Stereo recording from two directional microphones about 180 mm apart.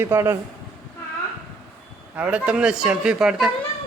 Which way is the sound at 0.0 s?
15° right (ahead or behind).